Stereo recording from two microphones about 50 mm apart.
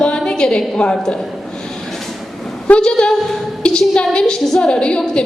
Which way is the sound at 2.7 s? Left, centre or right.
Centre.